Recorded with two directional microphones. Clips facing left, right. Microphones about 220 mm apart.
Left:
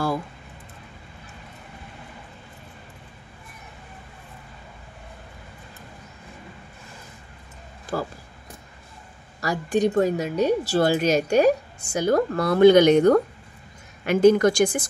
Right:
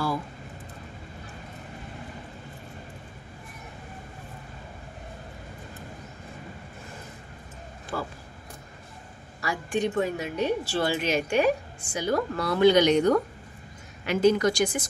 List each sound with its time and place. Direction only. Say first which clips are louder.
7.9 s speech: left 5 dB; 40° left (ahead or behind)
9.4 s a woman's voice: left 6 dB; 40° left (ahead or behind)